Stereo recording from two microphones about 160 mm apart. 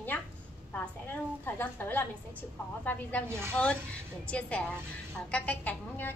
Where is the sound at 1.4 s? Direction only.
10° left (ahead or behind).